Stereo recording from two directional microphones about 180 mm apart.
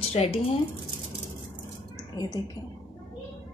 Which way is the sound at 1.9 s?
20° left (ahead or behind).